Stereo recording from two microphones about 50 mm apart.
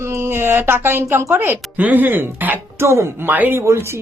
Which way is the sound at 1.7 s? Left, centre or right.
Right.